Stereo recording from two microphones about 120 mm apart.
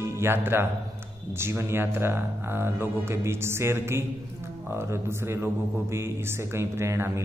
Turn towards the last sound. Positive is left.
turn(degrees=-25)  # may be behind; listen again after turning